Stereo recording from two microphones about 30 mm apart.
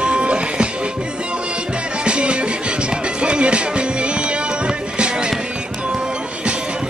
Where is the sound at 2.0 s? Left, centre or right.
Right.